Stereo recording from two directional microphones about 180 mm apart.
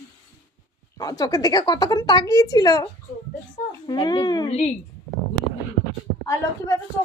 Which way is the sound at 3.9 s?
25° left (ahead or behind).